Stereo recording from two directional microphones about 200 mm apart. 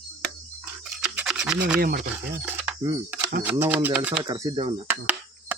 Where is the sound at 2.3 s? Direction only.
10° right (ahead or behind).